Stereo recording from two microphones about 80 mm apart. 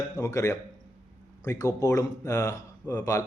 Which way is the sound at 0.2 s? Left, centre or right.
Left.